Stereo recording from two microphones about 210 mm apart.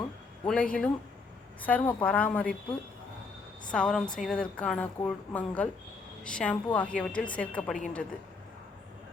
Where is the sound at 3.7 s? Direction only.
5° left (ahead or behind).